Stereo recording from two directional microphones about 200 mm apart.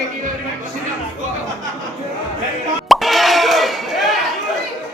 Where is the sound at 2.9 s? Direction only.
Centre (ahead or behind).